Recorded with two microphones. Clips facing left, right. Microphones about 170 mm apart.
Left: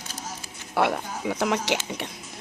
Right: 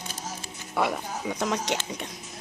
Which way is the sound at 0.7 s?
Centre (ahead or behind).